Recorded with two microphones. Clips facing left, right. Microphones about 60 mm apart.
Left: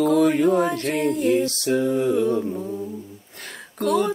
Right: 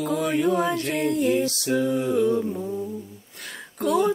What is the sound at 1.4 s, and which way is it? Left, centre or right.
Music, left.